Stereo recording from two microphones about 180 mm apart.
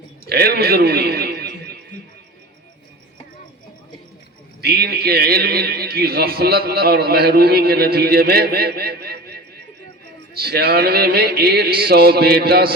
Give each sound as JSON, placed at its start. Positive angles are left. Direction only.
{"t": 0.3, "sound": "a man's voice", "side_deg": -60}
{"t": 4.6, "sound": "a man's voice", "side_deg": -60}